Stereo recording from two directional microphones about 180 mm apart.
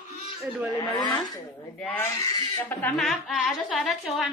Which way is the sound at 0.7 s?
20° left (ahead or behind).